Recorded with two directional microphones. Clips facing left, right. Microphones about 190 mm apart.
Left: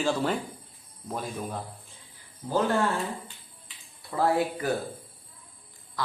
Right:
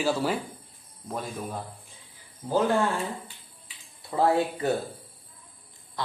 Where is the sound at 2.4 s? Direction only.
15° right (ahead or behind).